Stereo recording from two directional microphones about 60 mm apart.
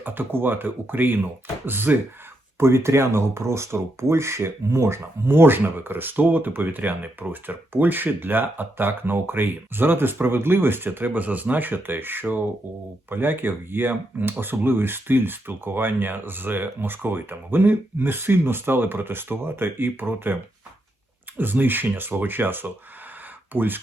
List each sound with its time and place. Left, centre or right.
0.0 s speech: right
2.6 s speech: right